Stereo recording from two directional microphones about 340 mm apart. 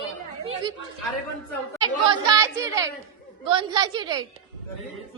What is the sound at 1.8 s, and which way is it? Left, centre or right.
Speech, centre.